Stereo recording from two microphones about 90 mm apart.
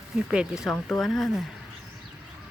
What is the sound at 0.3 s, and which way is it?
Speech, 10° right (ahead or behind).